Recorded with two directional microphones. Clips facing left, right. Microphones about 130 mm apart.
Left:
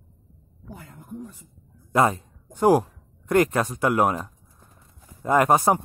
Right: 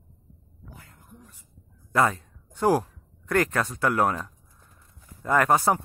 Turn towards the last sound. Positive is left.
turn(degrees=20)  # may be behind; listen again after turning